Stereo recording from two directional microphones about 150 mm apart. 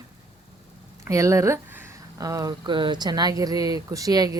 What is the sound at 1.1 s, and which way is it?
Speech, 20° right (ahead or behind).